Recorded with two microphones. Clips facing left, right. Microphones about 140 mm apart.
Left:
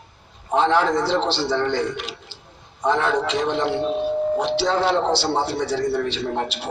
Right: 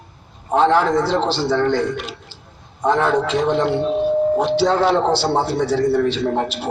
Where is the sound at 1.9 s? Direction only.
45° right (ahead or behind).